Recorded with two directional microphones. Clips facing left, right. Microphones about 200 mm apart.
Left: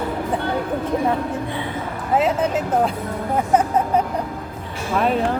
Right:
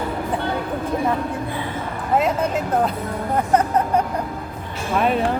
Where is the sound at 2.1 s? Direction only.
5° left (ahead or behind).